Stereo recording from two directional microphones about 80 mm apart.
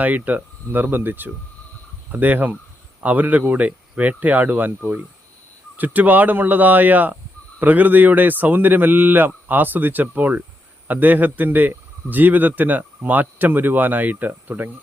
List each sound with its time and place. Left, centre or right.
0.0 s speech: right